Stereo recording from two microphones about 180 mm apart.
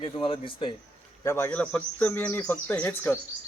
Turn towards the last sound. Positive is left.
turn(degrees=10)  # may be behind; listen again after turning